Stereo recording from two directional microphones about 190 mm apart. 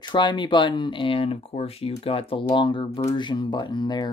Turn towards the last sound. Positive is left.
turn(degrees=20)  # may be behind; listen again after turning